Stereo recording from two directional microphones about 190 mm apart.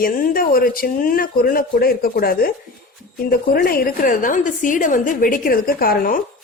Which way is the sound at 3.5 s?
50° left (ahead or behind).